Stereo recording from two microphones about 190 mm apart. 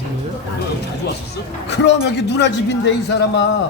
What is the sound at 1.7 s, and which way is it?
A man's voice, 65° left (ahead or behind).